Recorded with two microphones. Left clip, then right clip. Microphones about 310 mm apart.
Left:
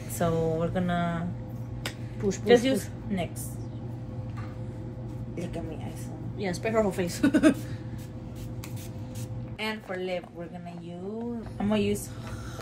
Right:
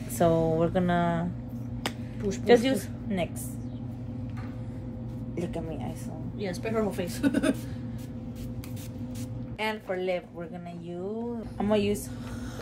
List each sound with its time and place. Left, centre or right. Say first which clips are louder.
0.2 s a sound: right 3 dB; right
2.4 s speech: even; right
6.4 s a woman's voice: left 3 dB; centre
9.6 s speech: right 2 dB; right
11.5 s speech: right 2 dB; right